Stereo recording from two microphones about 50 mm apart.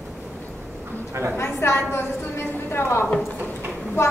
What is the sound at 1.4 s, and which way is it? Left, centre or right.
Speech, left.